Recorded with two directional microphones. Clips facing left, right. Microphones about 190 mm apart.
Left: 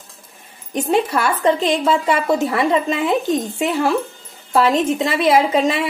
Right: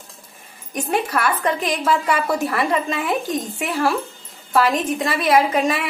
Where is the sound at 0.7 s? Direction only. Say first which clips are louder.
Left 4 dB; 25° left (ahead or behind).